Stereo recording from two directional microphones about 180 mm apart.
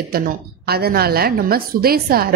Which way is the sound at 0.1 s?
60° right (ahead or behind).